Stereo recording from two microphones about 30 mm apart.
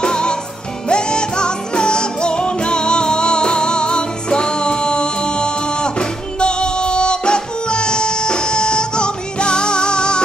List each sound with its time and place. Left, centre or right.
0.0 s music: left